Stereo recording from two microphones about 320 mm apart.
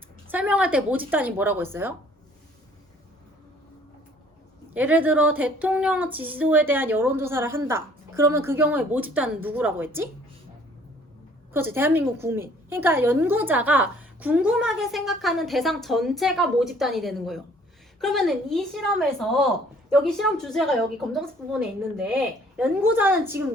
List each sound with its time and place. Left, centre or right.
0.3 s a woman's voice: centre
4.7 s a woman's voice: centre
11.5 s a woman's voice: centre